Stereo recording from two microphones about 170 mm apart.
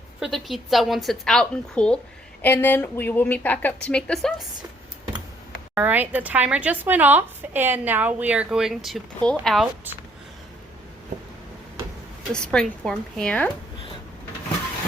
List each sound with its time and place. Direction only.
0.2 s a woman's voice: centre (ahead or behind)
5.7 s speech: 10° right (ahead or behind)
11.1 s a sound: 45° right (ahead or behind)
12.3 s a woman's voice: 5° left (ahead or behind)